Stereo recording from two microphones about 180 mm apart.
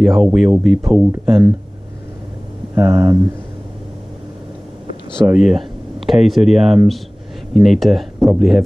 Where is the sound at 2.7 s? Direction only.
15° right (ahead or behind).